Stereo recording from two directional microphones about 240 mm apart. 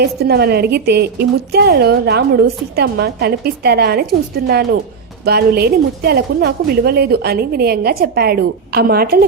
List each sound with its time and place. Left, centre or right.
0.0 s a woman's voice: right